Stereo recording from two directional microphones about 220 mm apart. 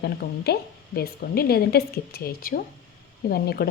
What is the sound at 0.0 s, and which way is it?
Speech, 45° left (ahead or behind).